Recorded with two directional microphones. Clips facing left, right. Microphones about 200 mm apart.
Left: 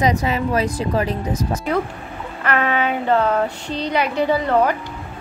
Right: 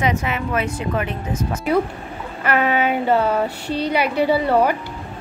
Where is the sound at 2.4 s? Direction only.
5° right (ahead or behind).